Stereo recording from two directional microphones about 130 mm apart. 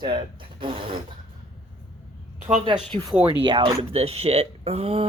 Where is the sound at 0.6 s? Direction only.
40° right (ahead or behind).